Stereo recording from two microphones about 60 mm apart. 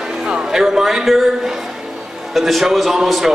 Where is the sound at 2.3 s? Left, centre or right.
Centre.